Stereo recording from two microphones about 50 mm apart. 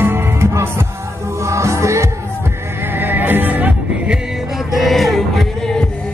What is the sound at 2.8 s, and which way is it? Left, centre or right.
Music, right.